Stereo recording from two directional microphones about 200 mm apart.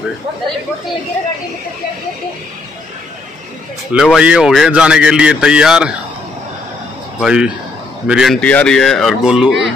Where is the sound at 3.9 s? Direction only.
5° right (ahead or behind).